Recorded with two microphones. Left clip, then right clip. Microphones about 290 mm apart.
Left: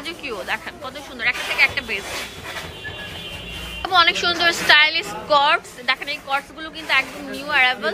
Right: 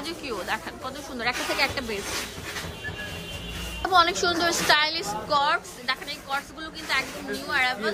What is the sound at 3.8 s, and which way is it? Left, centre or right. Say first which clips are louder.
A woman's voice: left 4 dB; centre.